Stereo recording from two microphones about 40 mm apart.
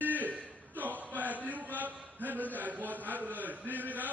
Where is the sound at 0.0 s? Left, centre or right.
Right.